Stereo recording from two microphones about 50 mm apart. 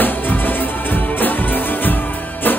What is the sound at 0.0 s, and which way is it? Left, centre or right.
Music, left.